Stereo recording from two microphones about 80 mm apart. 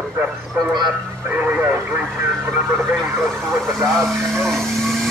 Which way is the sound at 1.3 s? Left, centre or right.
Right.